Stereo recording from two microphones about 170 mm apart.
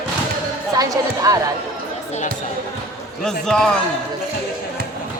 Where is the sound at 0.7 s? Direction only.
20° right (ahead or behind).